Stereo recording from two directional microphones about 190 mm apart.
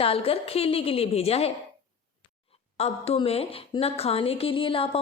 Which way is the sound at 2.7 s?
35° left (ahead or behind).